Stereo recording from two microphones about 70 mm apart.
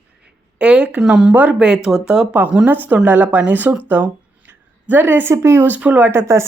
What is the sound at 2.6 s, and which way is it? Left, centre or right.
Speech, right.